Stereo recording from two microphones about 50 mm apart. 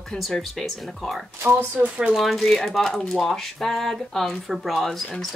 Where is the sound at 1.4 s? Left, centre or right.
Right.